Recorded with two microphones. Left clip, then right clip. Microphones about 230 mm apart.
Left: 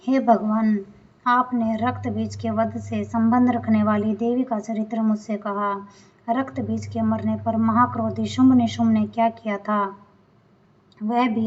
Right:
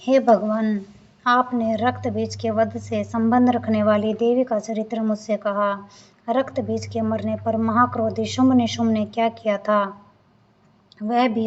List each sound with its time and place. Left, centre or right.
0.0 s a woman's voice: right
11.0 s a woman's voice: right